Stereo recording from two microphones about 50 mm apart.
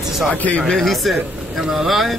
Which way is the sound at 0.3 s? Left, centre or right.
Left.